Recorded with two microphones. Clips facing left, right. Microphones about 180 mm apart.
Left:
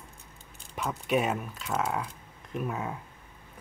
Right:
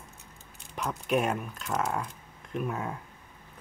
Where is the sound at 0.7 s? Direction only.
Centre (ahead or behind).